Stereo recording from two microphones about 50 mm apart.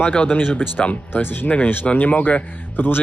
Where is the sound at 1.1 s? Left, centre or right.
Left.